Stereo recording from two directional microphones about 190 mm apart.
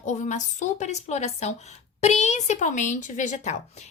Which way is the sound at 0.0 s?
40° left (ahead or behind).